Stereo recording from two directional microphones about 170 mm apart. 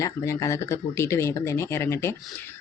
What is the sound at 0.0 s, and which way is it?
Speech, 15° left (ahead or behind).